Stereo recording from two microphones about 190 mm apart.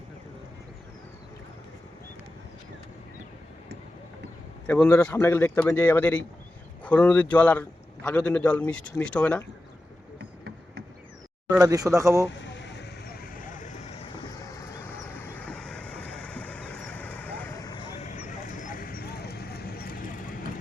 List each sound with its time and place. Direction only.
4.6 s a man's voice: 5° left (ahead or behind)
11.5 s speech: 15° right (ahead or behind)
12.4 s vehicle: 65° left (ahead or behind); by 14.1 s 35° left (ahead or behind)
14.4 s vehicle: 15° left (ahead or behind)
17.6 s vehicle: 25° left (ahead or behind)
18.3 s a sound: 40° left (ahead or behind)